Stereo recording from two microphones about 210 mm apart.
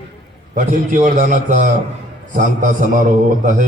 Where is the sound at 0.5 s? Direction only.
35° right (ahead or behind).